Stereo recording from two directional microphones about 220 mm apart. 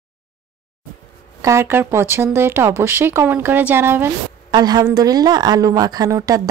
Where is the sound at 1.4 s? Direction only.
10° right (ahead or behind).